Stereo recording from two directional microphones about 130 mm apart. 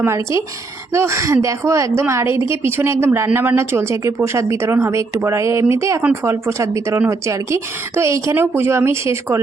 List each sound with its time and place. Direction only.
0.0 s a woman's voice: 20° right (ahead or behind)